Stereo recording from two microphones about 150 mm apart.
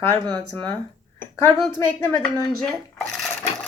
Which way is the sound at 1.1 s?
15° left (ahead or behind).